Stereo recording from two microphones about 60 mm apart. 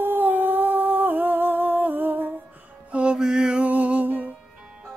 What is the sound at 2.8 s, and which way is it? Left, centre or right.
Music, centre.